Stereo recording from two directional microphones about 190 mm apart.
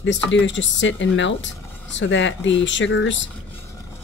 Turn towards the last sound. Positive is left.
turn(degrees=70)  # may be behind; listen again after turning